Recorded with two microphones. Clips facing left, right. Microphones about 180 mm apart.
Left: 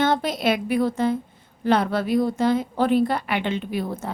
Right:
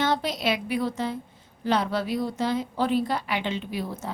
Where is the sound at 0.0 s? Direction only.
50° left (ahead or behind).